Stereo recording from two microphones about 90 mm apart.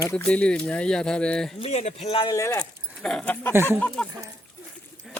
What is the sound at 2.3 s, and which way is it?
Speech, 35° left (ahead or behind).